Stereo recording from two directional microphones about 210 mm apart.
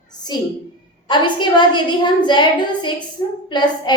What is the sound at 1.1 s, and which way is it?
A woman's voice, 20° left (ahead or behind).